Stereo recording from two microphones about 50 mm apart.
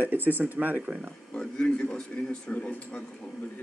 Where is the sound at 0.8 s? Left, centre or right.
Right.